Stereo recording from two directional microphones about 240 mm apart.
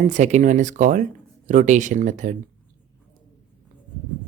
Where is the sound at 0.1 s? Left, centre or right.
Right.